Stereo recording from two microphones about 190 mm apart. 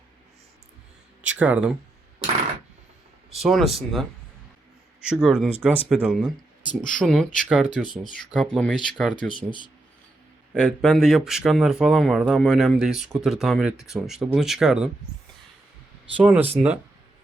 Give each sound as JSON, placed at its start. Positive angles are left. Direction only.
{"t": 1.2, "sound": "speech", "side_deg": -10}
{"t": 3.2, "sound": "speech", "side_deg": 0}
{"t": 9.1, "sound": "speech", "side_deg": 25}
{"t": 10.5, "sound": "speech", "side_deg": -5}
{"t": 16.1, "sound": "speech", "side_deg": -5}